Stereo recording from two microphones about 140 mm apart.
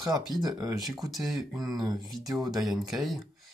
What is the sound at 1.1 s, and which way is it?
Speech, centre (ahead or behind).